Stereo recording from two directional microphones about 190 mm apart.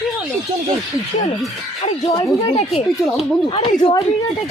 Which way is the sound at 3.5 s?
25° left (ahead or behind).